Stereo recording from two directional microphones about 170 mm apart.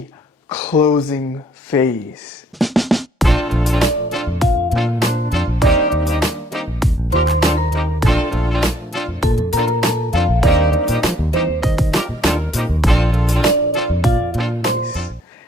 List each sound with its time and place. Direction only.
0.5 s speech: 10° left (ahead or behind)
0.8 s speech: 25° left (ahead or behind)
1.7 s speech: 15° left (ahead or behind)
2.6 s music: centre (ahead or behind)